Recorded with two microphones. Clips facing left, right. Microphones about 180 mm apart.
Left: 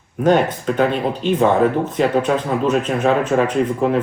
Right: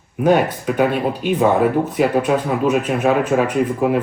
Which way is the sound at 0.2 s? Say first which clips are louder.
Even; 10° right (ahead or behind).